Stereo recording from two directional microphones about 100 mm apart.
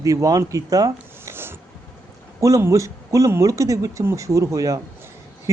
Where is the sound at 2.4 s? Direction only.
30° right (ahead or behind).